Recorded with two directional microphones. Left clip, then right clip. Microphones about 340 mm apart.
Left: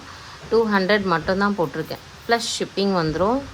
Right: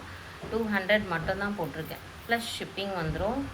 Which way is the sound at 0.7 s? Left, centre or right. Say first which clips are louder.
Left 7 dB; centre.